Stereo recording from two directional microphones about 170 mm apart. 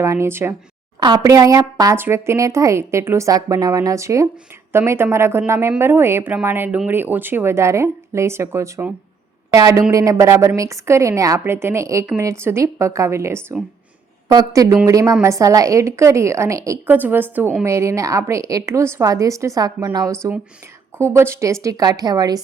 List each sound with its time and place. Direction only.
0.0 s a woman's voice: 15° right (ahead or behind)